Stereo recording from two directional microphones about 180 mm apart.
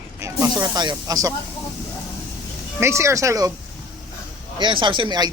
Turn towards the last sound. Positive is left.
turn(degrees=-25)  # may be behind; listen again after turning